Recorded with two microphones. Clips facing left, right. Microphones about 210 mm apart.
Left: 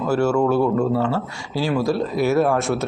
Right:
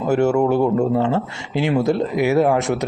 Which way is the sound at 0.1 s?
20° right (ahead or behind).